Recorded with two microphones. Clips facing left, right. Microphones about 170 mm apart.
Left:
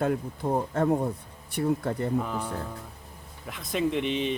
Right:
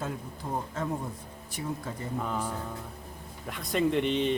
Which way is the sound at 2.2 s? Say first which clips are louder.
Left 1 dB; centre (ahead or behind).